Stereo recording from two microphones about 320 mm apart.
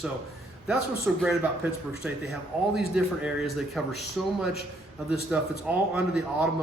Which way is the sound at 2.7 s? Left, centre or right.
Centre.